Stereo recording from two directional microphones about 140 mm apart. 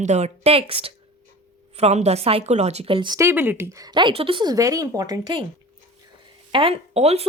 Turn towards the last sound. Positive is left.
turn(degrees=-50)  # may be behind; listen again after turning